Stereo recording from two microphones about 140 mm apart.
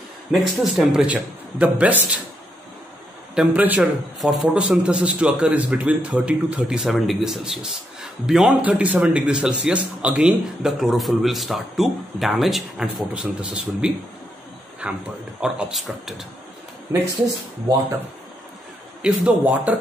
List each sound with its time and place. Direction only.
0.3 s a man's voice: 5° right (ahead or behind)
3.3 s a man's voice: 10° right (ahead or behind)
17.6 s speech: 20° right (ahead or behind)
19.0 s a man's voice: 10° right (ahead or behind)